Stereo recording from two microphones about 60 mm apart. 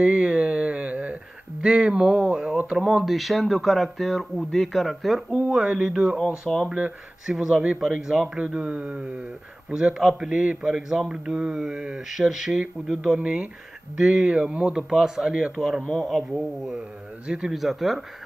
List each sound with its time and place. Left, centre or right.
0.0 s a sound: centre
2.8 s speech: centre
5.6 s speech: centre
6.5 s speech: centre
7.2 s speech: centre
7.5 s speech: right
7.8 s speech: centre
9.9 s speech: centre
13.2 s speech: right; by 18.0 s centre